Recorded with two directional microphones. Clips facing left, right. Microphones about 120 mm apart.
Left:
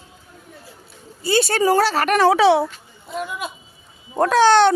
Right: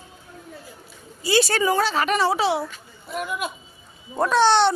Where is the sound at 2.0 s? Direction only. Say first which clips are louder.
Left 6 dB; 60° left (ahead or behind).